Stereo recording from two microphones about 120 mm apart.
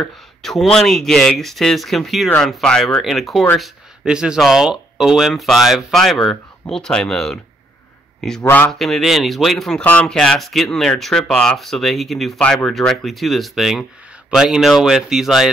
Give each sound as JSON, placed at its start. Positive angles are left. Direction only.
{"t": 0.0, "sound": "speech", "side_deg": 0}
{"t": 2.2, "sound": "speech", "side_deg": 10}
{"t": 8.5, "sound": "speech", "side_deg": 15}
{"t": 8.7, "sound": "speech", "side_deg": 0}